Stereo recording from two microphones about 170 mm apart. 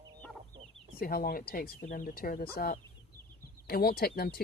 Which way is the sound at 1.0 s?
65° left (ahead or behind).